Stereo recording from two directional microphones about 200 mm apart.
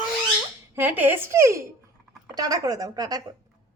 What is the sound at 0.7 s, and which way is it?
A woman's voice, 10° right (ahead or behind).